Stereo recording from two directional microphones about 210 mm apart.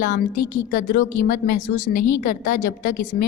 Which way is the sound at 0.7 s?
40° left (ahead or behind).